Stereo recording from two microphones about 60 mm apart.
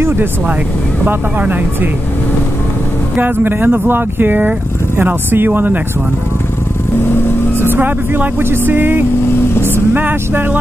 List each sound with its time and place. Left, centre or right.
0.0 s speech: right
1.0 s speech: right
3.2 s speech: right
7.0 s vehicle: left
7.7 s speech: right
9.3 s vehicle: left
9.9 s speech: right